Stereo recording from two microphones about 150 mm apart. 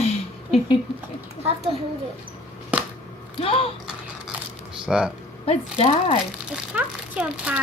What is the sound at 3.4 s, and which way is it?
Speech, 40° left (ahead or behind).